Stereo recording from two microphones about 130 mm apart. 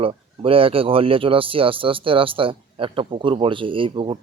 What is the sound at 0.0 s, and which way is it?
Speech, 45° right (ahead or behind).